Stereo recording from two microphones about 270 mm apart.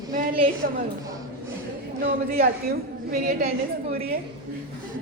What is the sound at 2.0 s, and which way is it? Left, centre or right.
A woman's voice, right.